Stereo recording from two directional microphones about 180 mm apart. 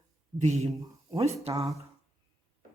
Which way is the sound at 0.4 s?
40° right (ahead or behind).